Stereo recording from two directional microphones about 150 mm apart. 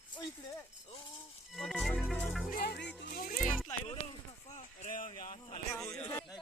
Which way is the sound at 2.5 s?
90° left.